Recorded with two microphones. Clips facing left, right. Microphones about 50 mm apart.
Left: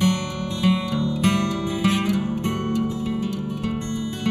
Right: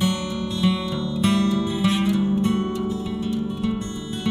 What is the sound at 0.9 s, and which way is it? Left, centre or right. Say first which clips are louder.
Music: even; left.